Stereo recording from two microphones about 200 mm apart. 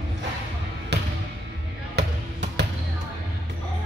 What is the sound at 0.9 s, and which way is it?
Music, 55° right (ahead or behind).